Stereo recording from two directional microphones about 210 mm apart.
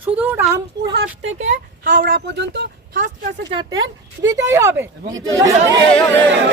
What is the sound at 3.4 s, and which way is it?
Speech, 20° right (ahead or behind).